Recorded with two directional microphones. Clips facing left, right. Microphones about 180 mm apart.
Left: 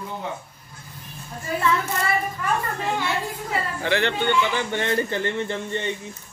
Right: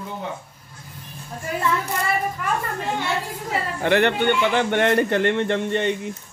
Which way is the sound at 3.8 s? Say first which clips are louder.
Right 6 dB; 55° right (ahead or behind).